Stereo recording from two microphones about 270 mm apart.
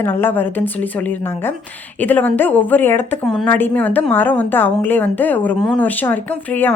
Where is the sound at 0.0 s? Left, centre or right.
Centre.